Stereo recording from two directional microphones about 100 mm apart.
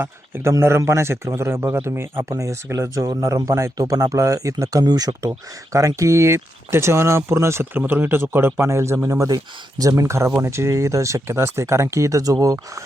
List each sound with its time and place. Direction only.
0.0 s speech: 20° right (ahead or behind)